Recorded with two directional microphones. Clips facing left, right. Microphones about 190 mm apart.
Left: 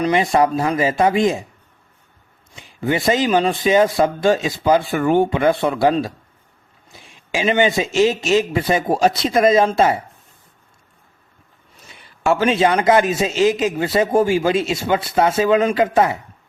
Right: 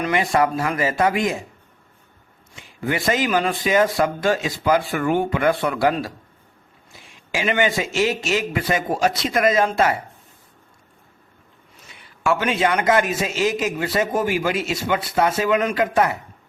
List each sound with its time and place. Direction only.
0.0 s a man's voice: 20° left (ahead or behind)
2.8 s a man's voice: 25° left (ahead or behind)
7.3 s a man's voice: 20° left (ahead or behind)
12.2 s a man's voice: 25° left (ahead or behind)